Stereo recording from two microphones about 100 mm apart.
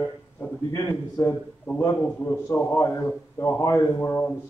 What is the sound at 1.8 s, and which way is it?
A man's voice, 25° left (ahead or behind).